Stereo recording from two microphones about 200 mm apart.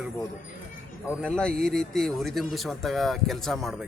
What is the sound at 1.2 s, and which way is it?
A man's voice, 5° left (ahead or behind).